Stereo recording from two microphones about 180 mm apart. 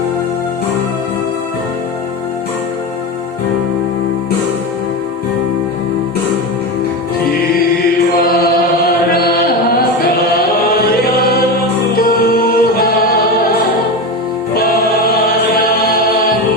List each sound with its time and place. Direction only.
8.2 s chant: 55° left (ahead or behind)
11.9 s music: 55° left (ahead or behind)
14.5 s choir: 55° left (ahead or behind)